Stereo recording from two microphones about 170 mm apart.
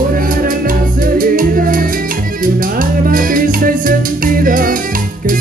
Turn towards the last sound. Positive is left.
turn(degrees=-55)  # may be behind; listen again after turning